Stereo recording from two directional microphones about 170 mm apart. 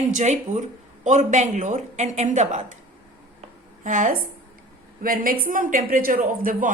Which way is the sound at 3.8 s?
50° right (ahead or behind).